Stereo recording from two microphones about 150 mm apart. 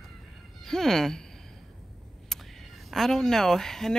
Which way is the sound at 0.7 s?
5° left (ahead or behind).